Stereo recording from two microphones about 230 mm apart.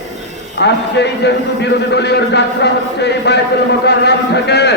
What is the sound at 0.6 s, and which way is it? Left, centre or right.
A man's voice, left.